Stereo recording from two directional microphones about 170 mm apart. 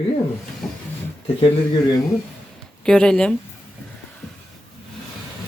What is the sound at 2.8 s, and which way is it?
Speech, 5° left (ahead or behind).